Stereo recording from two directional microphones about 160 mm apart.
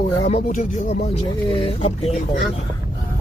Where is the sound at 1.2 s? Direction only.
30° left (ahead or behind).